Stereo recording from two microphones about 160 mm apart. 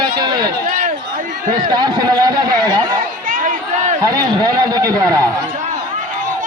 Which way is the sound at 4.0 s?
25° right (ahead or behind).